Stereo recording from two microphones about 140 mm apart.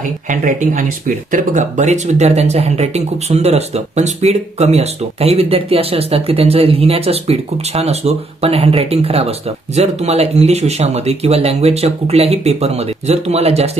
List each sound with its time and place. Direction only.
0.3 s speech: 70° right (ahead or behind); by 13.7 s 50° right (ahead or behind)